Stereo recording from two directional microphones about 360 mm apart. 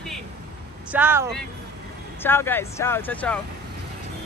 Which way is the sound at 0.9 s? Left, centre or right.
Centre.